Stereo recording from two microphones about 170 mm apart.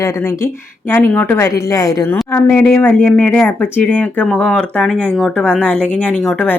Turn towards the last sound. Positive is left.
turn(degrees=5)  # may be behind; listen again after turning